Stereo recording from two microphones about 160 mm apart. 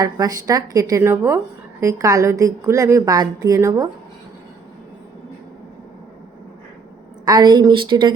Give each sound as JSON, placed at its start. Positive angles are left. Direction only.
{"t": 0.0, "sound": "a woman's voice", "side_deg": -25}
{"t": 7.3, "sound": "a woman's voice", "side_deg": -25}